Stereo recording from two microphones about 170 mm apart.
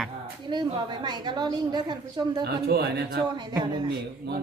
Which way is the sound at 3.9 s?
70° right (ahead or behind).